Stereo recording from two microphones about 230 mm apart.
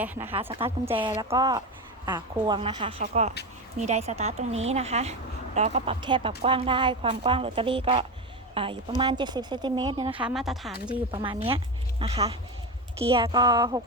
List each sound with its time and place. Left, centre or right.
0.0 s a woman's voice: centre
10.2 s a woman's voice: centre
11.1 s a woman's voice: right